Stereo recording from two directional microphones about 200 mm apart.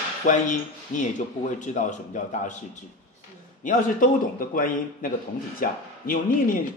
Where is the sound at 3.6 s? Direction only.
45° left (ahead or behind).